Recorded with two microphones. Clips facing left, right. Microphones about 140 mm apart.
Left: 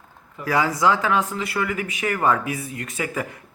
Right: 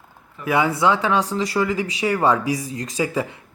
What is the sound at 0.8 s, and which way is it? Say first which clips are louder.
Speech: right 1 dB; 25° right (ahead or behind).